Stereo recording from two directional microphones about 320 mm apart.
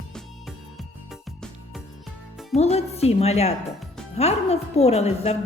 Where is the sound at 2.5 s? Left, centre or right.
Centre.